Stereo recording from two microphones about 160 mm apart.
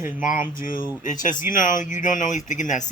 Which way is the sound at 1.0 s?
55° left (ahead or behind).